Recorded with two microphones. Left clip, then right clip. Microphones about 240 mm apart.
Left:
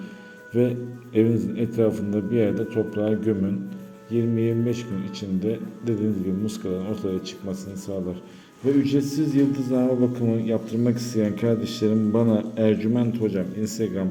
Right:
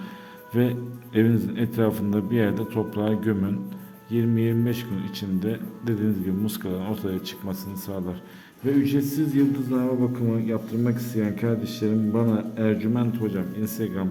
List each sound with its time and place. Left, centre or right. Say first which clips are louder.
1.1 s a man's voice: left 2 dB; right